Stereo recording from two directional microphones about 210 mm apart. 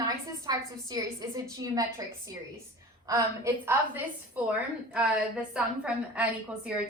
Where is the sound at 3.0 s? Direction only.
20° right (ahead or behind).